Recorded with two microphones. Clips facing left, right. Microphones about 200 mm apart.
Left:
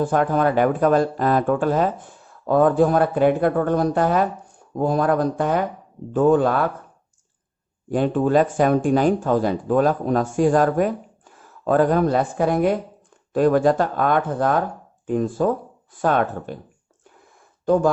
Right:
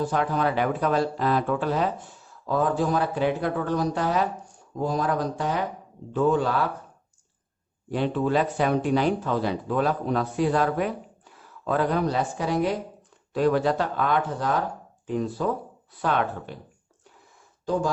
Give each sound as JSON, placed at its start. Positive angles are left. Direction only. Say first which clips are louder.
{"t": 0.0, "sound": "speech", "louder": "left 5 dB", "side_deg": 50}
{"t": 7.9, "sound": "speech", "louder": "left 5 dB", "side_deg": 45}